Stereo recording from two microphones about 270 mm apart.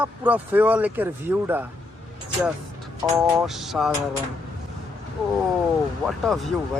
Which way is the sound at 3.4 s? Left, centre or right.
Centre.